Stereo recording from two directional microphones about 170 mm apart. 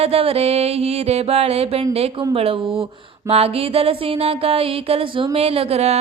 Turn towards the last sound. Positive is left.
turn(degrees=-40)  # may be behind; listen again after turning